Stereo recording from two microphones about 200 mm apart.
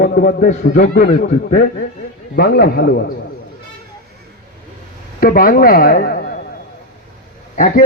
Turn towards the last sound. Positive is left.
turn(degrees=40)  # may be behind; listen again after turning